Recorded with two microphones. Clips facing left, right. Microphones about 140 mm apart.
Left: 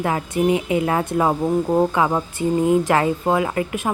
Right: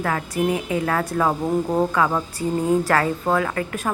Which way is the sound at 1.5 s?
5° left (ahead or behind).